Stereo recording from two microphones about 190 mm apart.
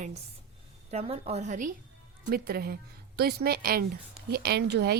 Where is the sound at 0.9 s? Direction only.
35° right (ahead or behind).